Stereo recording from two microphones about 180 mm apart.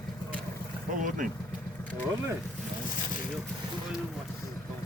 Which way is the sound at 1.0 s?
45° right (ahead or behind).